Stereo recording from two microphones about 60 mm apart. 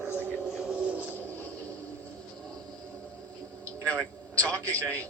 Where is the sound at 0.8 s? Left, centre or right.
Right.